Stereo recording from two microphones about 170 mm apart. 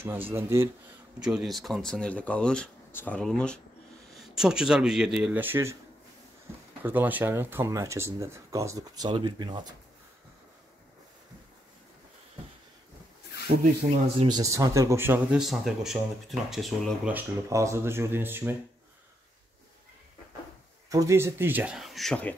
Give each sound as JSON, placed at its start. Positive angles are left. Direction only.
{"t": 0.0, "sound": "speech", "side_deg": -15}
{"t": 1.2, "sound": "speech", "side_deg": 0}
{"t": 6.8, "sound": "speech", "side_deg": -10}
{"t": 14.0, "sound": "speech", "side_deg": -25}
{"t": 15.4, "sound": "speech", "side_deg": 0}
{"t": 17.1, "sound": "speech", "side_deg": -20}
{"t": 20.9, "sound": "speech", "side_deg": -20}